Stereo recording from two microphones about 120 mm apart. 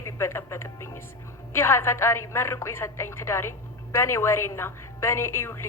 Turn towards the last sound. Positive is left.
turn(degrees=20)  # may be behind; listen again after turning